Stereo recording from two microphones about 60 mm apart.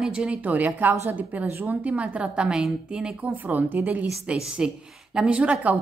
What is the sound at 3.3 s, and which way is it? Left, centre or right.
A woman's voice, right.